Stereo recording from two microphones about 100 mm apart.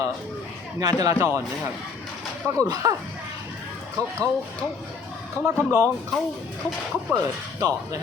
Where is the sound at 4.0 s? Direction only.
35° right (ahead or behind).